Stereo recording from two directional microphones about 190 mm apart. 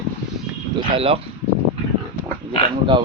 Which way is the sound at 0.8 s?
30° right (ahead or behind).